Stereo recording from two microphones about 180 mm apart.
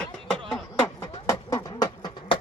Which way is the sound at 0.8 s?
15° left (ahead or behind).